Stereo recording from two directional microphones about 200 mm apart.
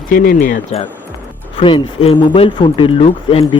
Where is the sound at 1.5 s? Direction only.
25° left (ahead or behind).